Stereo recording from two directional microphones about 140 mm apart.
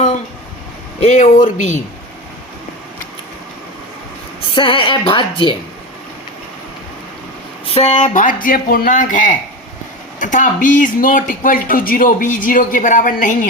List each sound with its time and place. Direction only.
0.9 s speech: 55° left (ahead or behind)
4.5 s a woman's voice: 35° left (ahead or behind)
7.7 s speech: 45° left (ahead or behind); by 13.5 s 70° left (ahead or behind)